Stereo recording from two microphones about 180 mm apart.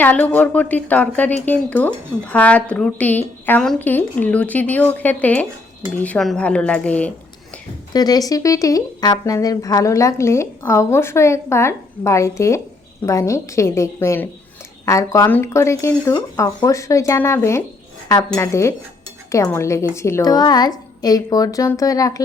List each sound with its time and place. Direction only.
0.0 s a woman's voice: 10° left (ahead or behind)
7.9 s a woman's voice: 20° left (ahead or behind)